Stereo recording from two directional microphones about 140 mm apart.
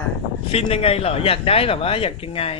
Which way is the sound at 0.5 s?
45° left (ahead or behind).